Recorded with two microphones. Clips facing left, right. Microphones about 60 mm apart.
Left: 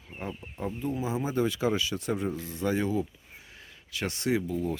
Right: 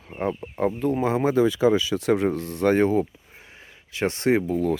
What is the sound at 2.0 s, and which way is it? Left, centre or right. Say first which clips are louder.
Speech: right 9 dB; right.